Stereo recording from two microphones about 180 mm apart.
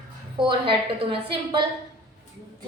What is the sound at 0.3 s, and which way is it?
A woman's voice, 30° right (ahead or behind).